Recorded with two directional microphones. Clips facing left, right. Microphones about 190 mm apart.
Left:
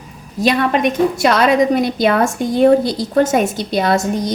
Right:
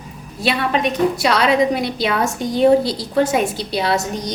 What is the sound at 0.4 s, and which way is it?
A woman's voice, 50° left (ahead or behind).